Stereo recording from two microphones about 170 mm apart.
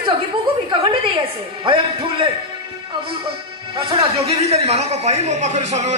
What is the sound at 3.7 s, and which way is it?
Speech, 35° right (ahead or behind).